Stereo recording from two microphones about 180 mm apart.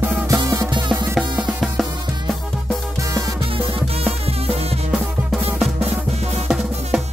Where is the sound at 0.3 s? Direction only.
25° right (ahead or behind).